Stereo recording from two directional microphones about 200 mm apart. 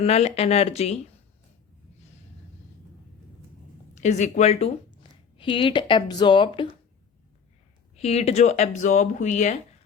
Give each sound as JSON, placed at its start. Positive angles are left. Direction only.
{"t": 0.0, "sound": "speech", "side_deg": 30}
{"t": 4.0, "sound": "speech", "side_deg": 35}
{"t": 7.9, "sound": "speech", "side_deg": 30}